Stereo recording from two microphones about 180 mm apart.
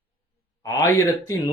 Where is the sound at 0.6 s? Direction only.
20° left (ahead or behind).